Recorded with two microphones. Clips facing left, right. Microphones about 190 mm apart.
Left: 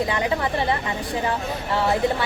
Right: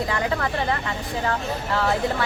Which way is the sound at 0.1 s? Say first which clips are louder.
Left 1 dB; 20° left (ahead or behind).